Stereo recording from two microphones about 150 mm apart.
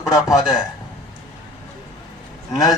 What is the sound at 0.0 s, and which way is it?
Speech, 25° left (ahead or behind).